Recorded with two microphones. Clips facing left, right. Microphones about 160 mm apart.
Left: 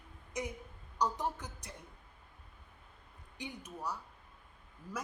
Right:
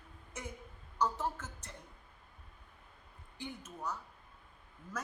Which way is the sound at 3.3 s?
15° left (ahead or behind).